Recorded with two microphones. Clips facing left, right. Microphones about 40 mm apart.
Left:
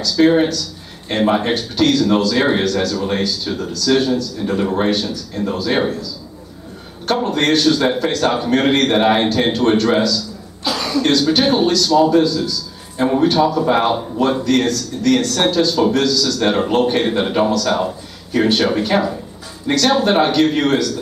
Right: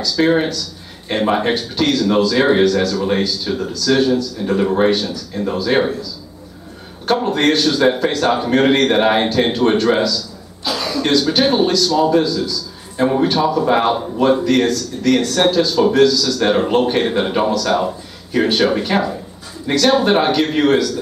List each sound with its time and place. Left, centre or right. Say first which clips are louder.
0.0 s a man's voice: left 2 dB; centre
7.1 s a man's voice: right 1 dB; centre